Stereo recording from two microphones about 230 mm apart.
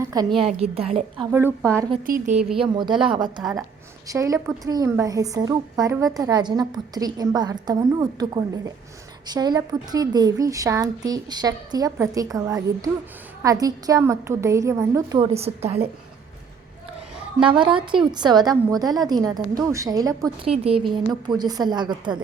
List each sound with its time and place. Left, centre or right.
0.0 s a woman's voice: centre
1.6 s a woman's voice: centre
2.0 s a woman's voice: right
2.4 s speech: centre
2.7 s a woman's voice: centre
15.3 s a woman's voice: right
17.4 s a woman's voice: right